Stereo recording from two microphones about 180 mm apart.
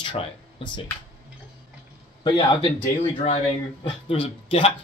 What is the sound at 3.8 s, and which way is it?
Speech, 30° left (ahead or behind).